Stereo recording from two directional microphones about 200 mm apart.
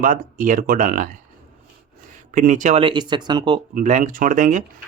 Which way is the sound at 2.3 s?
40° right (ahead or behind).